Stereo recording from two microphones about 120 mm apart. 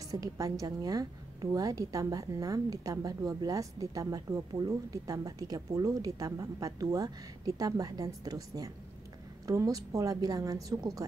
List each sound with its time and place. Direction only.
0.1 s a woman's voice: 30° right (ahead or behind)